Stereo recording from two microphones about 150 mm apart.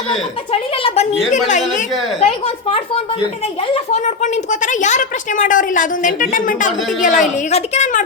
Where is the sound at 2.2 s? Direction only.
45° left (ahead or behind).